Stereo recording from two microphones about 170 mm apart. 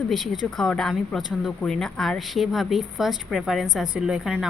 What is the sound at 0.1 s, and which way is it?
Speech, centre (ahead or behind).